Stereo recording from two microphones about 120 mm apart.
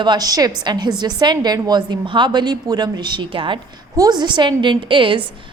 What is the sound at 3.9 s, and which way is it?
A woman's voice, 30° right (ahead or behind).